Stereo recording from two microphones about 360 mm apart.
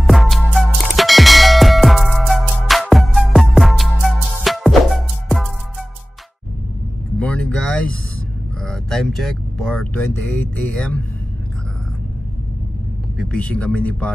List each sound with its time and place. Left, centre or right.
0.0 s music: centre
7.2 s a sound: centre
8.6 s vehicle: centre
10.7 s speech: centre
13.2 s speech: centre